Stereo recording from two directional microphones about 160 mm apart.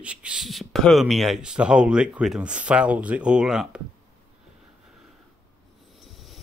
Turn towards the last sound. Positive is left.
turn(degrees=0)  # may be behind; listen again after turning